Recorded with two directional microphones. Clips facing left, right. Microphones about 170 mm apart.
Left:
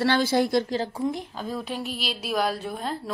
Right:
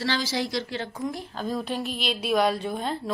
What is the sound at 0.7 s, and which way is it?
Speech, 35° left (ahead or behind).